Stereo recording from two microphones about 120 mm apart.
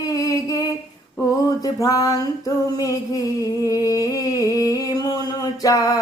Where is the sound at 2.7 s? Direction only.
30° left (ahead or behind).